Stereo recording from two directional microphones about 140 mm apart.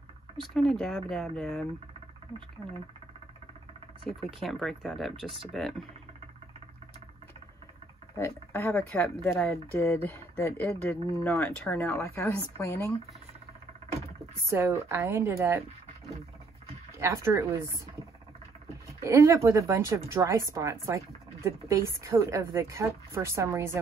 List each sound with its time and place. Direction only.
0.6 s speech: 5° left (ahead or behind)
4.4 s speech: centre (ahead or behind)
8.2 s speech: 15° left (ahead or behind)
14.4 s a woman's voice: 20° right (ahead or behind)
17.0 s a woman's voice: 20° right (ahead or behind)
19.0 s a woman's voice: 20° right (ahead or behind)